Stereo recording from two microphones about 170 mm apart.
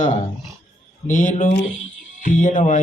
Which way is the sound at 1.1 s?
50° left (ahead or behind).